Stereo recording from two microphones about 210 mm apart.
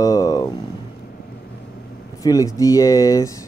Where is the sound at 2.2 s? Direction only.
15° left (ahead or behind).